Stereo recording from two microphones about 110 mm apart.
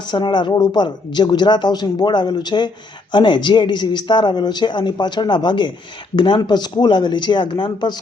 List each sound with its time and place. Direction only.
0.1 s speech: 45° left (ahead or behind)